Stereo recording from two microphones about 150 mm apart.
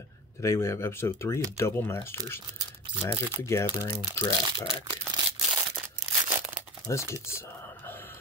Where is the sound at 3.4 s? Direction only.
20° left (ahead or behind).